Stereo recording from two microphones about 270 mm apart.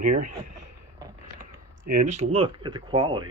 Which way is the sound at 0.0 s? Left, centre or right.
Right.